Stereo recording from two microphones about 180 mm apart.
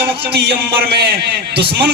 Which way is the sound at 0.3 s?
65° right (ahead or behind).